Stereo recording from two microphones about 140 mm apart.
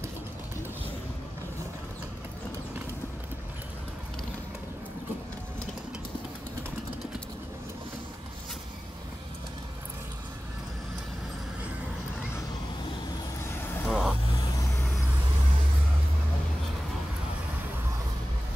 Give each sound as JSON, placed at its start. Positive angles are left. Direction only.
{"t": 13.4, "sound": "vehicle", "side_deg": 15}
{"t": 13.8, "sound": "vehicle", "side_deg": 0}